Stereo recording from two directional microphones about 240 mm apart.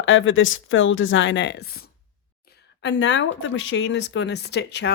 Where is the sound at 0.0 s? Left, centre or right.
Left.